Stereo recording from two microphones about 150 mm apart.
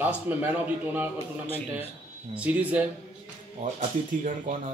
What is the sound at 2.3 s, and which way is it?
Speech, 10° right (ahead or behind).